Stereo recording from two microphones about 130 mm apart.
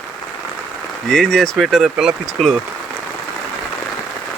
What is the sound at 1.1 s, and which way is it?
Speech, 5° left (ahead or behind).